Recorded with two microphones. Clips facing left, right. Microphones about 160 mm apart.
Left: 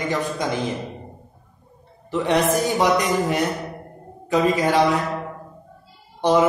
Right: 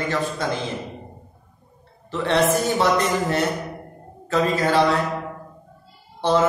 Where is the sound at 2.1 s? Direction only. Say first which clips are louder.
Even; 15° left (ahead or behind).